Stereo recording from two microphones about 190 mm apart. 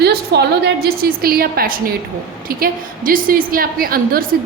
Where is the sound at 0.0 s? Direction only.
60° right (ahead or behind).